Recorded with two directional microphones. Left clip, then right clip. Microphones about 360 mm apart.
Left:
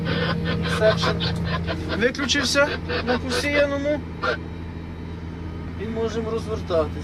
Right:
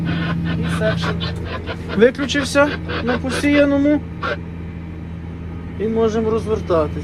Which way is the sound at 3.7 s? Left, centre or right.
Right.